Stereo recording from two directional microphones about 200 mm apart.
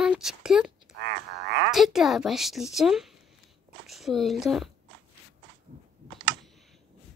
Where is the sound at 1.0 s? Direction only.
60° right (ahead or behind).